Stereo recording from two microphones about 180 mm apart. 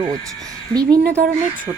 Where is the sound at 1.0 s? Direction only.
60° right (ahead or behind).